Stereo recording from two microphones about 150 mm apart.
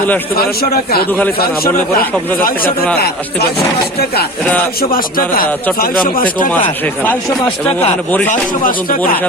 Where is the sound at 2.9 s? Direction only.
90° left.